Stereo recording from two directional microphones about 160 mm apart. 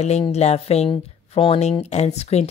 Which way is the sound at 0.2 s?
40° left (ahead or behind).